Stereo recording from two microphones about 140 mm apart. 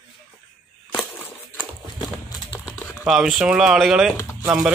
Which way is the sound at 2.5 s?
15° left (ahead or behind).